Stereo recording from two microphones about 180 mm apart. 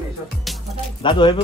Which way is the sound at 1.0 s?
25° left (ahead or behind).